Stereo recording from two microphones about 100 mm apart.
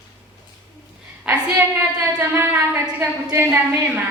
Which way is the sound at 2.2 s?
20° right (ahead or behind).